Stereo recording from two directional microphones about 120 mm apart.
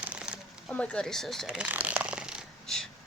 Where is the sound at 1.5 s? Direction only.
10° right (ahead or behind).